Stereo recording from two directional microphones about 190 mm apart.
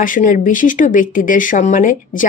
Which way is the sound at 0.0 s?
45° left (ahead or behind).